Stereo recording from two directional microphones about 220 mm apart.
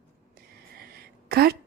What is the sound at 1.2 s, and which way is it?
Speech, 45° right (ahead or behind).